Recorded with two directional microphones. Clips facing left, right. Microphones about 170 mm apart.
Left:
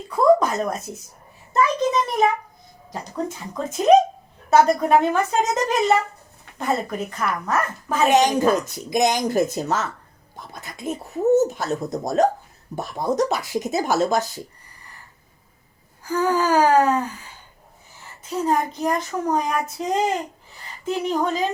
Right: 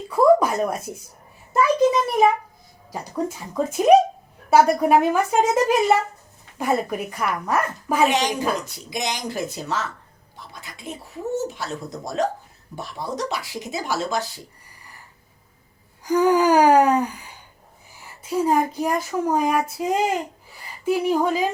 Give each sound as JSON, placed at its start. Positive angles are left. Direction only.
{"t": 0.2, "sound": "a sound", "side_deg": -10}
{"t": 3.5, "sound": "speech", "side_deg": -10}
{"t": 8.1, "sound": "speech", "side_deg": 45}
{"t": 16.0, "sound": "gasp", "side_deg": -15}
{"t": 17.9, "sound": "speech", "side_deg": -10}